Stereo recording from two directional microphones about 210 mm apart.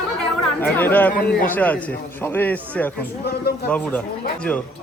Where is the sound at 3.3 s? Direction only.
50° left (ahead or behind).